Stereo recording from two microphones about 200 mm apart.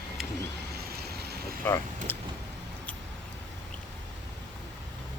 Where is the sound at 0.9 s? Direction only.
50° right (ahead or behind).